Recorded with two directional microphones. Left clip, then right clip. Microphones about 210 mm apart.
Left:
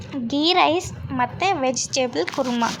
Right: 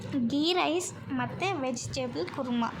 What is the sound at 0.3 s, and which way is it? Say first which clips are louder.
A woman's voice: left 10 dB; 15° left (ahead or behind).